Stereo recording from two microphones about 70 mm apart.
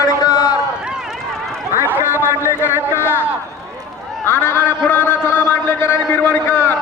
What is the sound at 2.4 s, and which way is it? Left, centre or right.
Speech, left.